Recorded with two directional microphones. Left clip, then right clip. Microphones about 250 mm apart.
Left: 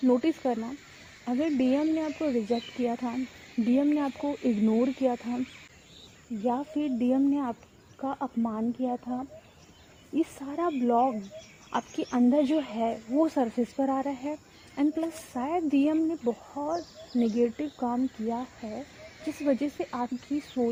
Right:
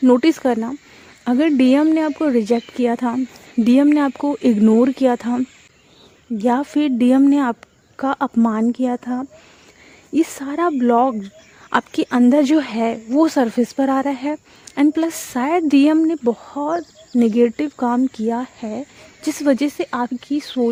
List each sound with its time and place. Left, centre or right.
0.0 s speech: right
6.4 s speech: right